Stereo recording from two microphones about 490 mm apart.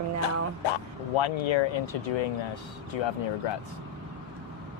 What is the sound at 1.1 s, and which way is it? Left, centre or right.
Speech, left.